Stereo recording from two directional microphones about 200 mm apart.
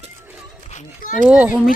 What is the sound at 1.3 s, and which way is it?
Speech, 5° right (ahead or behind).